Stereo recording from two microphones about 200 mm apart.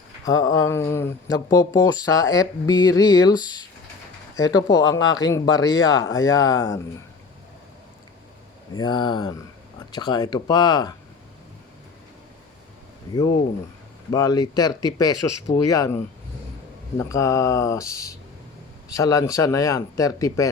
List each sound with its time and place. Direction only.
0.3 s speech: 20° left (ahead or behind)
8.7 s speech: 20° left (ahead or behind)
14.1 s speech: 20° left (ahead or behind)
17.0 s speech: 15° left (ahead or behind)